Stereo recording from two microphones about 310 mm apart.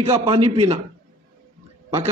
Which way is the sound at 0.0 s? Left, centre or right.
Centre.